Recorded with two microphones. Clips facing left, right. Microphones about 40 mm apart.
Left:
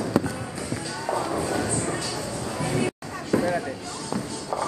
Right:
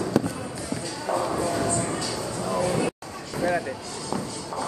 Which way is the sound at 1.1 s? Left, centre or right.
Centre.